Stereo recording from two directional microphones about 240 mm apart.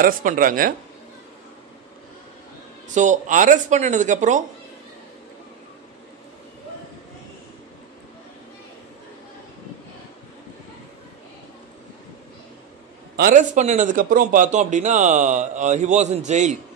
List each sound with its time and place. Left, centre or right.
0.0 s a man's voice: right
2.9 s a man's voice: right
13.1 s a man's voice: right